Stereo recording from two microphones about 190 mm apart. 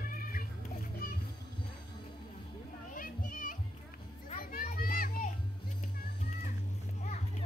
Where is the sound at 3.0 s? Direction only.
45° left (ahead or behind).